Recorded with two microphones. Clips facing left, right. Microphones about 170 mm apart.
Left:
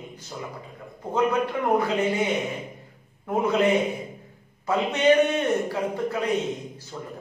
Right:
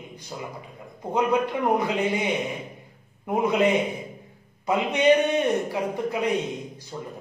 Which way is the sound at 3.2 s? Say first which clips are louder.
Even; 15° right (ahead or behind).